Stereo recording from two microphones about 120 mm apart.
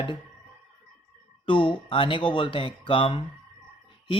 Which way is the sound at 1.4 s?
45° left (ahead or behind).